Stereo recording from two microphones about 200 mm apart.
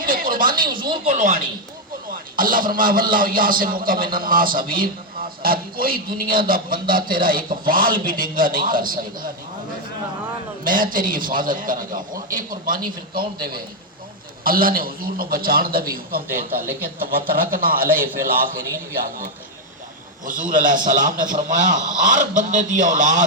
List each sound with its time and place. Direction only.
0.0 s a sound: 45° right (ahead or behind)
1.1 s a man's voice: 40° right (ahead or behind)
10.6 s a man's voice: 45° right (ahead or behind)
20.2 s a man's voice: 40° right (ahead or behind)